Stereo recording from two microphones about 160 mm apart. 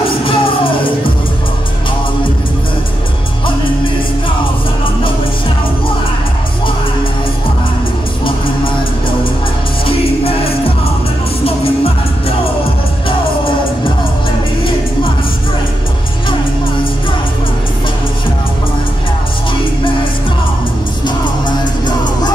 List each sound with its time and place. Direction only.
0.2 s music: 35° left (ahead or behind)
9.8 s music: 35° left (ahead or behind)
21.0 s music: 25° left (ahead or behind)